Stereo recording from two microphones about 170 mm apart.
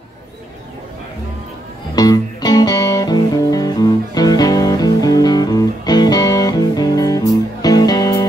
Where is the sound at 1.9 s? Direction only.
20° left (ahead or behind).